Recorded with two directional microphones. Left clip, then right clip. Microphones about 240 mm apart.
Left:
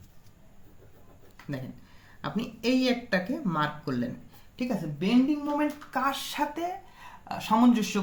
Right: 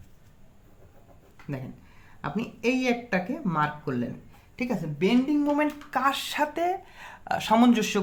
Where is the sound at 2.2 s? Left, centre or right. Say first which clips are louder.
Right 2 dB; right.